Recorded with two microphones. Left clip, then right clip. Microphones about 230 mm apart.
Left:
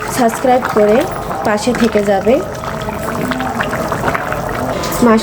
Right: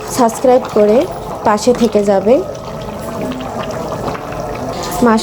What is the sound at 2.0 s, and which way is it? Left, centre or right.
Speech, centre.